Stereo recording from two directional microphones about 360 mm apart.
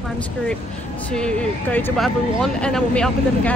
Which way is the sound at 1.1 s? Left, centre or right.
Centre.